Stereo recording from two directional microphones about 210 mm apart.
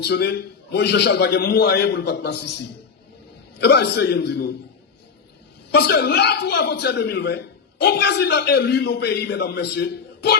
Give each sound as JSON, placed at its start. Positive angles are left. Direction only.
{"t": 0.0, "sound": "a man's voice", "side_deg": 50}
{"t": 3.6, "sound": "a man's voice", "side_deg": 50}
{"t": 5.7, "sound": "a man's voice", "side_deg": 50}